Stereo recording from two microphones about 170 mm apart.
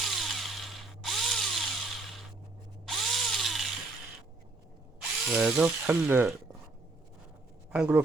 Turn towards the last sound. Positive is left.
turn(degrees=-5)  # may be behind; listen again after turning